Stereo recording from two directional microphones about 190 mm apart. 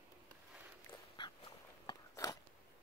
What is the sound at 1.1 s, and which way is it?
Dog, 25° left (ahead or behind).